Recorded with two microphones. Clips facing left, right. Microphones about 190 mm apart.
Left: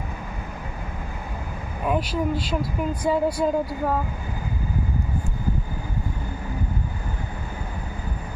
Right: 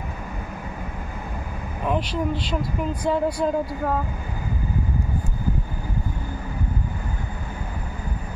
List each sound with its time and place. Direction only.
1.9 s speech: 5° left (ahead or behind)